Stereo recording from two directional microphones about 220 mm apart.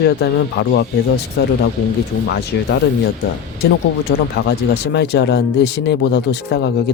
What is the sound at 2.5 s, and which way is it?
Speech, 50° left (ahead or behind).